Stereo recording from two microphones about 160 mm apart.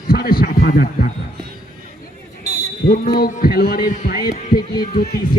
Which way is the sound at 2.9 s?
60° left (ahead or behind).